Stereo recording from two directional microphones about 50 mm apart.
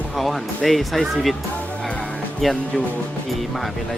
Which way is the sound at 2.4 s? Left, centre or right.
Centre.